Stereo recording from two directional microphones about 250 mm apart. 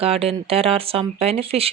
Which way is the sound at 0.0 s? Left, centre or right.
Right.